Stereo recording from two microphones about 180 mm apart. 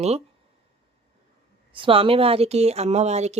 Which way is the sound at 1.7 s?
30° right (ahead or behind).